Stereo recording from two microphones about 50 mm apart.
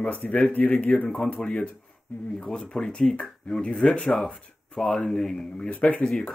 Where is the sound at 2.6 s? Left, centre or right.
Centre.